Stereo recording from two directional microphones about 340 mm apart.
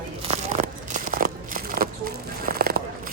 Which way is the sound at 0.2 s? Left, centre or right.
Centre.